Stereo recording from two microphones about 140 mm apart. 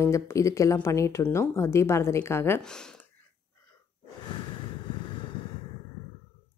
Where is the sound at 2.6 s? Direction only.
5° left (ahead or behind).